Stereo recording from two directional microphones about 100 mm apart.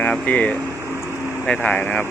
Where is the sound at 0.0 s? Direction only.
15° left (ahead or behind).